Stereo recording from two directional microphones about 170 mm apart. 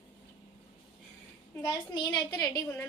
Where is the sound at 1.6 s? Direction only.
25° left (ahead or behind).